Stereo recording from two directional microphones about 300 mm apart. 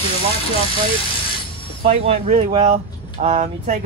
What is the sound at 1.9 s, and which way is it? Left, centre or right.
Speech, right.